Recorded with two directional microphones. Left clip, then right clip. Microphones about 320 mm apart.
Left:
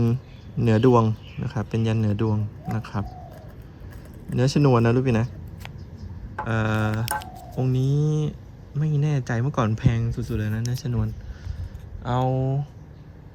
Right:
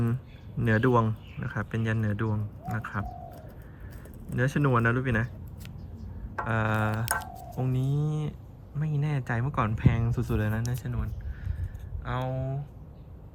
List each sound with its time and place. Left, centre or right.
0.6 s speech: centre
4.4 s speech: centre
6.4 s speech: centre
12.3 s speech: right